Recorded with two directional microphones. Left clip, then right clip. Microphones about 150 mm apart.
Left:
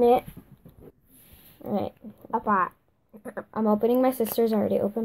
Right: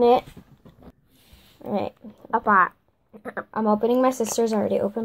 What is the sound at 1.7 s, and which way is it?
Speech, 10° left (ahead or behind).